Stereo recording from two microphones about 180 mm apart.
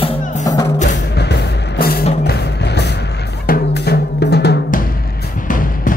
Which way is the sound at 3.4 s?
60° left (ahead or behind).